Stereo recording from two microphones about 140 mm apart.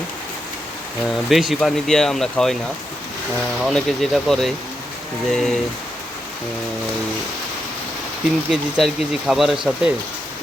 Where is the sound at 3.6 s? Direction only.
5° left (ahead or behind).